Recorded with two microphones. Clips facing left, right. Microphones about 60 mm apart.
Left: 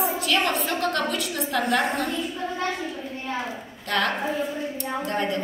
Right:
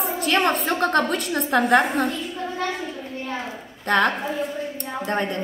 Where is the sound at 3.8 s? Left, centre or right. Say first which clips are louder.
Right 5 dB; right.